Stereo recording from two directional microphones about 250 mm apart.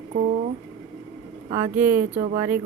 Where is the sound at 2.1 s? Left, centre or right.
Right.